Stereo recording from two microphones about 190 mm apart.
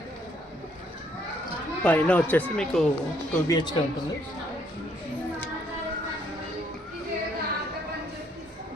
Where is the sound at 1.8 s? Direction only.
5° left (ahead or behind).